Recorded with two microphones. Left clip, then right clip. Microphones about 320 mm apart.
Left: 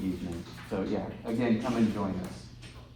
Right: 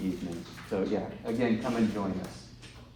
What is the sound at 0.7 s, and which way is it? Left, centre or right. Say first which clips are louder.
Speech: right 2 dB; centre.